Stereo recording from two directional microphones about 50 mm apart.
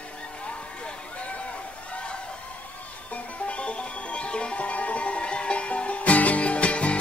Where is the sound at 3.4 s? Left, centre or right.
Left.